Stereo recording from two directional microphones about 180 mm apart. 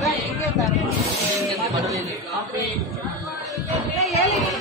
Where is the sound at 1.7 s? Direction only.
20° right (ahead or behind).